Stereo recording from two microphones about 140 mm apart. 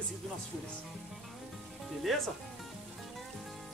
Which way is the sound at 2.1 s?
Centre (ahead or behind).